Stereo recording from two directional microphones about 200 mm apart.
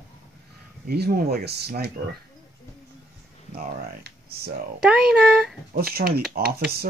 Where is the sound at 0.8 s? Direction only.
50° right (ahead or behind).